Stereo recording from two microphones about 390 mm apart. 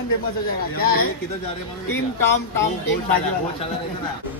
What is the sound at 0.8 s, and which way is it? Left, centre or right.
Speech, left.